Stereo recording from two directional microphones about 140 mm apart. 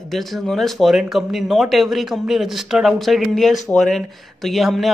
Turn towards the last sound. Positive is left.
turn(degrees=0)  # may be behind; listen again after turning